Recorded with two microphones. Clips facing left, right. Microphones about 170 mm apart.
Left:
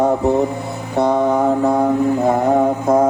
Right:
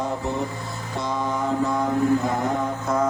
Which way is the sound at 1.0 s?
60° left (ahead or behind).